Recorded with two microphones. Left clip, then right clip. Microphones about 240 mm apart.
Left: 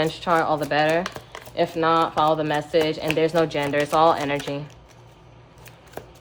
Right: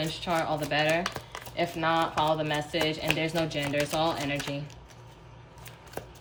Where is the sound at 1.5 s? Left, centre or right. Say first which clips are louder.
Left 7 dB; centre.